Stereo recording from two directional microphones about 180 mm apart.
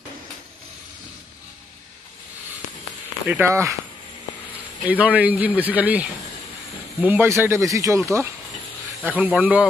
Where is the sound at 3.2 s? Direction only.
10° right (ahead or behind).